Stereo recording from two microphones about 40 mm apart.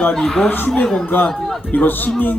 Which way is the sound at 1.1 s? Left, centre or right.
Left.